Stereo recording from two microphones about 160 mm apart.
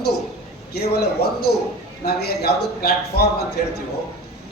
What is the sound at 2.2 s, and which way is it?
A man's voice, 80° left.